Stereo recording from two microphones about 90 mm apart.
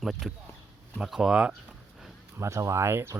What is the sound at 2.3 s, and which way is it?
Speech, 35° right (ahead or behind).